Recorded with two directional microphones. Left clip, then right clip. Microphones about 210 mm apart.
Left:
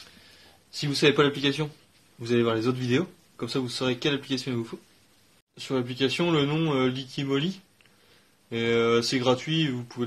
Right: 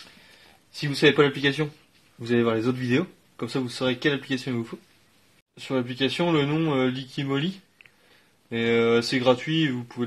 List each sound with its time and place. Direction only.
1.0 s speech: 35° right (ahead or behind)
2.2 s speech: 25° right (ahead or behind)